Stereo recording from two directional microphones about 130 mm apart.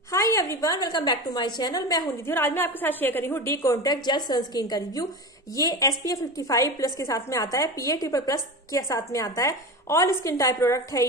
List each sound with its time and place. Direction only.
0.1 s a woman's voice: 25° left (ahead or behind)
2.3 s a woman's voice: 15° left (ahead or behind)